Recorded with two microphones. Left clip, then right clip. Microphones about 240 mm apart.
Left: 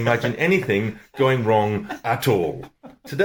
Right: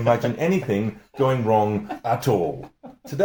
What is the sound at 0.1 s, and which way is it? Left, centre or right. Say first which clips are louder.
Speech: left 1 dB; left.